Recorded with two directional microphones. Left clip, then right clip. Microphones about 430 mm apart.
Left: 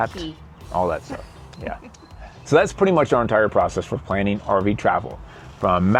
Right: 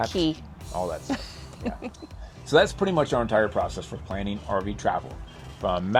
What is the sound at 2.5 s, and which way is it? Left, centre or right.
Speech, left.